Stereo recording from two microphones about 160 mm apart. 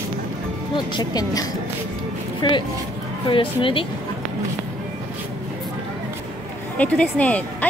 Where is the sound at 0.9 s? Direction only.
25° left (ahead or behind).